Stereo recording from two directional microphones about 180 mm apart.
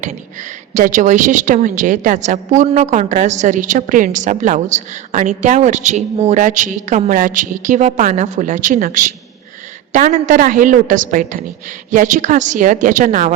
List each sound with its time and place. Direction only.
0.7 s a woman's voice: 45° right (ahead or behind)